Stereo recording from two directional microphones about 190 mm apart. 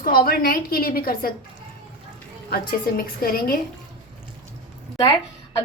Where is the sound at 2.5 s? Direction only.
50° left (ahead or behind).